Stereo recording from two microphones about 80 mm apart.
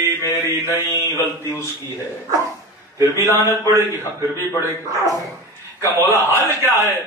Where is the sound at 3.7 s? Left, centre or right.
Right.